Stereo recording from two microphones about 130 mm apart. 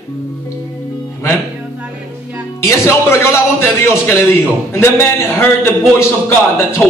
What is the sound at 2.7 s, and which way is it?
A man's voice, 20° left (ahead or behind).